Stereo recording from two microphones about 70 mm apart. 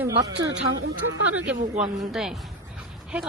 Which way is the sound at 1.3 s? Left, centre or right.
Centre.